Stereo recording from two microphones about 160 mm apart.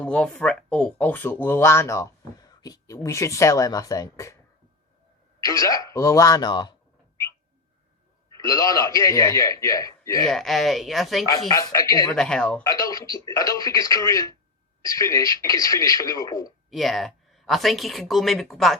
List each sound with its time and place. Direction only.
0.0 s speech: 5° left (ahead or behind)
5.5 s speech: 20° left (ahead or behind)
8.4 s speech: 20° left (ahead or behind)
10.2 s speech: centre (ahead or behind)
11.3 s speech: 20° left (ahead or behind)
12.1 s speech: 5° left (ahead or behind)
12.6 s speech: 20° left (ahead or behind)
16.6 s speech: centre (ahead or behind)